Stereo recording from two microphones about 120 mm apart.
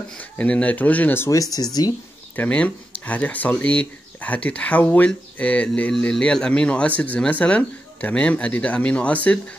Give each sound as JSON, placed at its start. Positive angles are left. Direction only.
{"t": 0.2, "sound": "speech", "side_deg": 10}
{"t": 2.3, "sound": "speech", "side_deg": 10}